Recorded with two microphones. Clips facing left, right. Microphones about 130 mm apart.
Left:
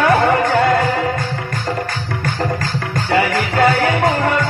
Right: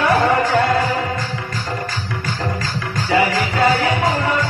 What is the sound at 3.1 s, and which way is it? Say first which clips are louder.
Music: even; 55° left (ahead or behind).